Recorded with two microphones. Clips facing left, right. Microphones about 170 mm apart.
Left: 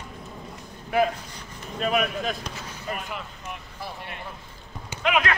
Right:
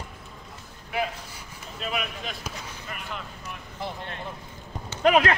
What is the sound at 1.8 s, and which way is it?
Speech, 45° left (ahead or behind).